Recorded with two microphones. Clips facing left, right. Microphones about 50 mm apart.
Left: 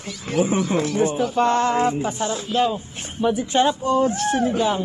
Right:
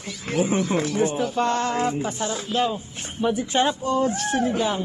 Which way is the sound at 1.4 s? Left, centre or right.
Centre.